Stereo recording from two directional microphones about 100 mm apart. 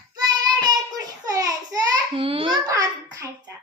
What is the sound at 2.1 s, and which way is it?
Babbling, 65° right (ahead or behind).